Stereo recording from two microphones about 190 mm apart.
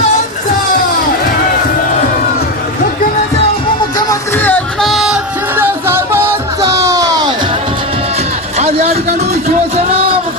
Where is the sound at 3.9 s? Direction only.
15° left (ahead or behind).